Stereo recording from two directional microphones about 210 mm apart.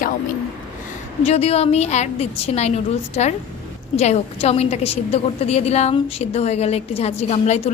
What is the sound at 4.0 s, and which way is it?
A woman's voice, 30° left (ahead or behind).